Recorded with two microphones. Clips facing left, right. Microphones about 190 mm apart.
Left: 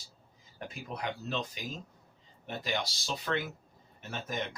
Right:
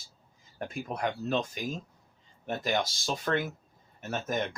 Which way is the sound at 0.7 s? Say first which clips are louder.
Right 5 dB; 50° right (ahead or behind).